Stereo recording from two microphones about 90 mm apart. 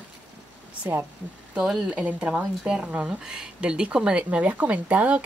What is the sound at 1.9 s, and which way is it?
A woman's voice, 15° right (ahead or behind).